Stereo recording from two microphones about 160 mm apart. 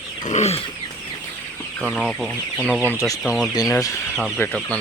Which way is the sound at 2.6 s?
10° right (ahead or behind).